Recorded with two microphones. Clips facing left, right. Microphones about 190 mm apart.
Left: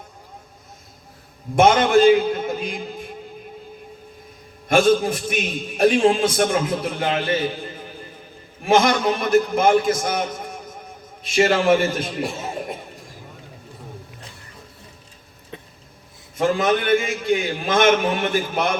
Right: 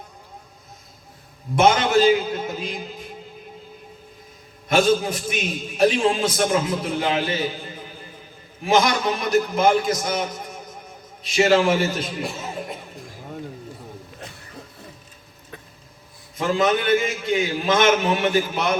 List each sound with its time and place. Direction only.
1.5 s a man's voice: 50° left (ahead or behind)
4.7 s a man's voice: 50° left (ahead or behind)
16.4 s a man's voice: 50° left (ahead or behind)